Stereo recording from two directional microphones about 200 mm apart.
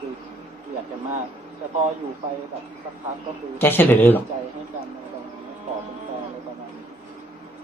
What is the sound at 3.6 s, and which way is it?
Speech, 10° left (ahead or behind).